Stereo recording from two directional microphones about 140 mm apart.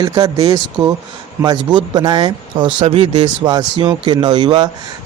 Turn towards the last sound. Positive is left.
turn(degrees=-35)  # may be behind; listen again after turning